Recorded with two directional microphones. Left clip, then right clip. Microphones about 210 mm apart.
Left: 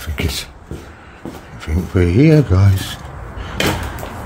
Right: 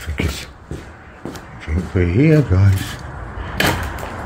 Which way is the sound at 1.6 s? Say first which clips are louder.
Left 3 dB; 30° left (ahead or behind).